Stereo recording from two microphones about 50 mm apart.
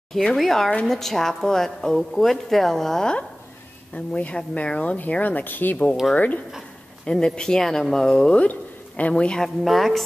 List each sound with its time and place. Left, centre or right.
0.4 s a woman's voice: centre
3.9 s speech: left
7.1 s a woman's voice: centre
8.4 s speech: left
9.4 s speech: centre